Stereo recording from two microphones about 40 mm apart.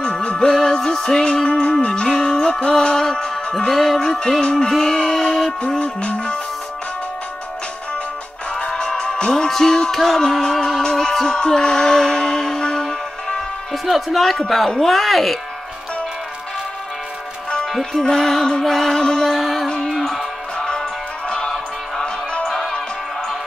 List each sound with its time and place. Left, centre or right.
0.0 s music: left
0.5 s music: centre
1.3 s music: left
2.8 s music: centre
4.4 s music: left
4.6 s music: centre
5.8 s music: left
8.7 s music: centre
13.8 s speech: centre
17.9 s music: centre
19.3 s speech: centre
20.0 s music: centre
20.5 s music: centre
22.5 s music: centre